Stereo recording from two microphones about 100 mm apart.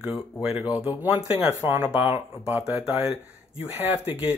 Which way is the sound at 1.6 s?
25° right (ahead or behind).